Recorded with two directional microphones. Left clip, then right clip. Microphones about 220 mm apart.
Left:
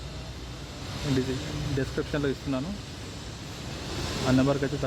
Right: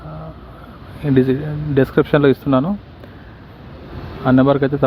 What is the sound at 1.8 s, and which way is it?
Speech, 35° right (ahead or behind).